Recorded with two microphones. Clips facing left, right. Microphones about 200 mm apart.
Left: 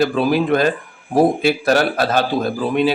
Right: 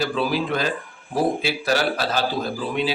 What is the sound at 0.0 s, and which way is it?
A man's voice, 55° left (ahead or behind).